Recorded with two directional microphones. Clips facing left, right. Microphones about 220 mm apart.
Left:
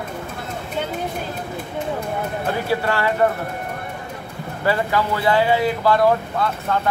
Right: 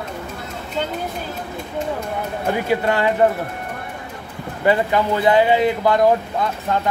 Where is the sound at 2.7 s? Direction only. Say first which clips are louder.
Right 3 dB; 20° right (ahead or behind).